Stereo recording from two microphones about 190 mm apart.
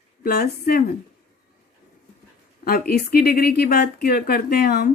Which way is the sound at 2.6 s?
50° left (ahead or behind).